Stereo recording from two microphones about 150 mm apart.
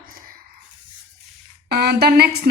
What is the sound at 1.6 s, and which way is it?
Speech, 90° right.